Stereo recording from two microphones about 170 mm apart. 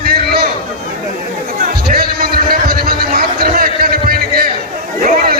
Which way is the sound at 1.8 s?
60° right (ahead or behind).